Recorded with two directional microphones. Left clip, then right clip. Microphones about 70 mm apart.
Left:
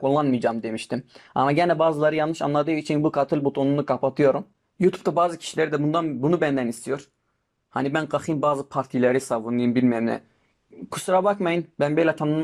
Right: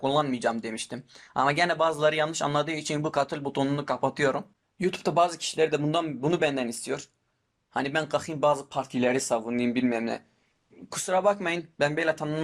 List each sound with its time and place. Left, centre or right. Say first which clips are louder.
0.0 s speech: left 4 dB; centre
4.8 s speech: left 3 dB; centre
11.9 s speech: left 6 dB; centre